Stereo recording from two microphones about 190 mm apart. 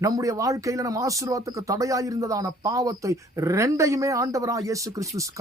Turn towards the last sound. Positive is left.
turn(degrees=-15)  # may be behind; listen again after turning